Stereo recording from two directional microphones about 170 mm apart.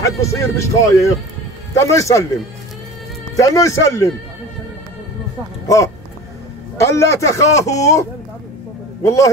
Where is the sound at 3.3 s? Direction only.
20° left (ahead or behind).